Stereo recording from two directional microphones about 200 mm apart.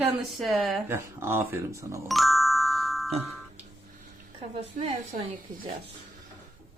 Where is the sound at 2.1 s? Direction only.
Centre (ahead or behind).